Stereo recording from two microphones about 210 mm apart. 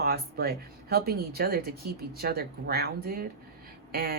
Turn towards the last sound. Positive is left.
turn(degrees=-45)  # may be behind; listen again after turning